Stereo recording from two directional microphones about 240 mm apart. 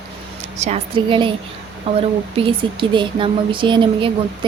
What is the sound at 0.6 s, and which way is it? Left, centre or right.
Speech, right.